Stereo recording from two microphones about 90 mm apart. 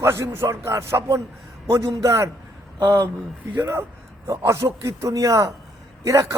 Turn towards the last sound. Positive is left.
turn(degrees=-35)  # may be behind; listen again after turning